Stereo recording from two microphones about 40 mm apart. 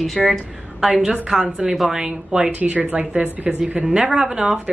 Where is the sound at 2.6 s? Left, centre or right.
Right.